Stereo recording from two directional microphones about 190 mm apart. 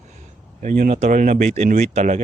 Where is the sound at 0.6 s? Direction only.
45° right (ahead or behind).